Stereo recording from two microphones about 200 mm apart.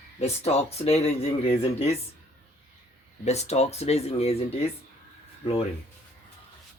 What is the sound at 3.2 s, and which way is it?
Speech, 35° left (ahead or behind).